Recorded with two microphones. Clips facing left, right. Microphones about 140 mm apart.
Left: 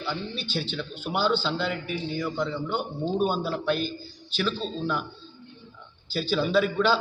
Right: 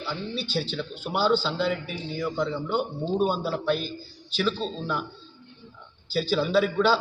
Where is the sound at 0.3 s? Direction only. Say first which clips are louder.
Right 2 dB; 40° right (ahead or behind).